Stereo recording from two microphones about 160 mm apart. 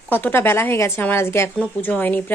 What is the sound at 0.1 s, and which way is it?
Speech, 10° left (ahead or behind).